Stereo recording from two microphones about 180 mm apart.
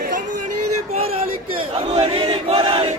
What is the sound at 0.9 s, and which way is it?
Battle cry, 35° right (ahead or behind).